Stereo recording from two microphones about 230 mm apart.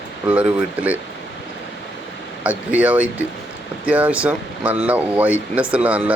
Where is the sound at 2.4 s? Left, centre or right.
Centre.